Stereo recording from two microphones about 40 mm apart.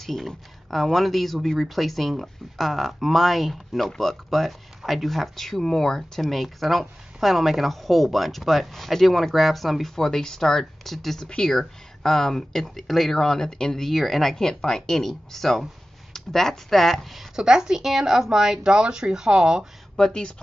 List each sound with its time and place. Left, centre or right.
0.0 s speech: centre
13.8 s speech: centre
14.3 s speech: centre
17.4 s speech: centre
20.0 s speech: left